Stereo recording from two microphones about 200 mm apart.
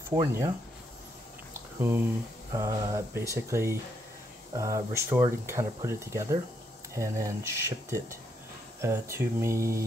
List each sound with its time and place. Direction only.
0.1 s speech: 15° right (ahead or behind)
1.8 s speech: 10° right (ahead or behind)